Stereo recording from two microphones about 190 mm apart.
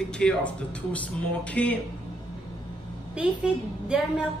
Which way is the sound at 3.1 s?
5° right (ahead or behind).